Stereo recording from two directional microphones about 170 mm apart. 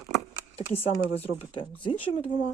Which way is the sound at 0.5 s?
35° left (ahead or behind).